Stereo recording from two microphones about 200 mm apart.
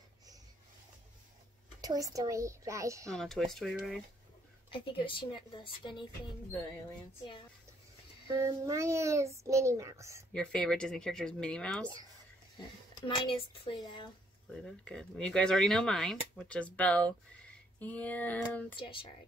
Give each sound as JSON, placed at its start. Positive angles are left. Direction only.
{"t": 1.8, "sound": "a child's voice", "side_deg": -15}
{"t": 3.1, "sound": "speech", "side_deg": 0}
{"t": 4.6, "sound": "speech", "side_deg": 25}
{"t": 8.5, "sound": "a child's voice", "side_deg": -15}
{"t": 10.3, "sound": "speech", "side_deg": 5}
{"t": 13.0, "sound": "speech", "side_deg": 25}
{"t": 14.5, "sound": "speech", "side_deg": 5}
{"t": 17.7, "sound": "female singing", "side_deg": 5}
{"t": 18.8, "sound": "speech", "side_deg": 25}